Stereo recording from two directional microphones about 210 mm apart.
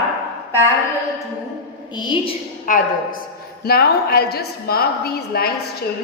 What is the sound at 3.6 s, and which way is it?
A woman's voice, 50° left (ahead or behind).